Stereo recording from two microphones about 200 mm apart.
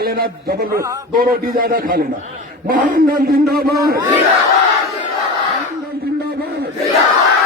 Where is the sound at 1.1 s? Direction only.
45° right (ahead or behind).